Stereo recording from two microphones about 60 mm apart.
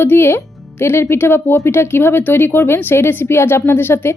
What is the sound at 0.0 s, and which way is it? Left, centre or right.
Speech, left.